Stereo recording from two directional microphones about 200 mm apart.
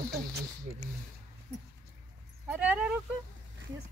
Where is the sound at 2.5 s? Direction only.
5° right (ahead or behind).